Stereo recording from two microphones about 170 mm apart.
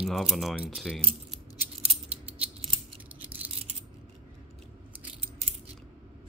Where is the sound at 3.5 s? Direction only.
35° right (ahead or behind).